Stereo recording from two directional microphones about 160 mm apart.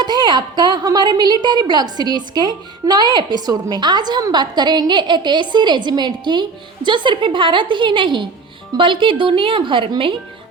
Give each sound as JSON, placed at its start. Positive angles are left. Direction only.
{"t": 0.0, "sound": "a woman's voice", "side_deg": -25}